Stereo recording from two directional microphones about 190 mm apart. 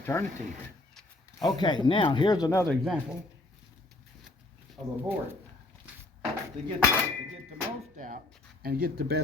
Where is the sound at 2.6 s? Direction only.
Centre (ahead or behind).